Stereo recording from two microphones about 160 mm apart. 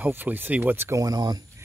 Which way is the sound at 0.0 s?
10° right (ahead or behind).